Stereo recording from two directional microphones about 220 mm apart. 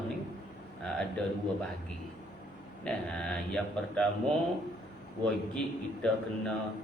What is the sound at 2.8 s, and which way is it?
Speech, 5° left (ahead or behind).